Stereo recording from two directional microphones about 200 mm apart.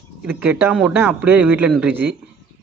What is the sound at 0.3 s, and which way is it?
A man's voice, 10° right (ahead or behind).